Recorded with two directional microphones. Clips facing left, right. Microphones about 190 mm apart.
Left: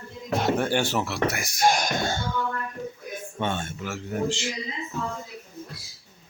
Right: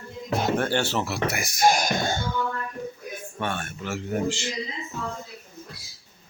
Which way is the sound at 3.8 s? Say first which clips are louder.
Right 4 dB; centre (ahead or behind).